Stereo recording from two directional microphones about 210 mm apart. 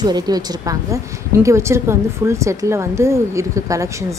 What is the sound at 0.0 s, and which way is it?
A woman's voice, 20° right (ahead or behind).